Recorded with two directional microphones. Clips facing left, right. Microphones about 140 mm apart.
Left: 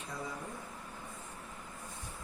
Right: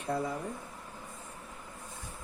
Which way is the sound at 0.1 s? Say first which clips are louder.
Right 10 dB; 60° right (ahead or behind).